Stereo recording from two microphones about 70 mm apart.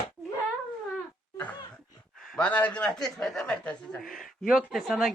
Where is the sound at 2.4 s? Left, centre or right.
Left.